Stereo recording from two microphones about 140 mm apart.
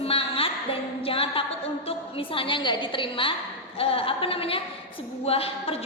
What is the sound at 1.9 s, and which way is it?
A woman's voice, 40° left (ahead or behind).